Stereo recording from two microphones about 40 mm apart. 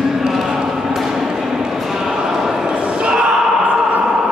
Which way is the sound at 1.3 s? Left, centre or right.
Centre.